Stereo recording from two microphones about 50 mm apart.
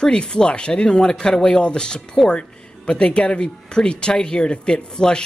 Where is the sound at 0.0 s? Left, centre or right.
Centre.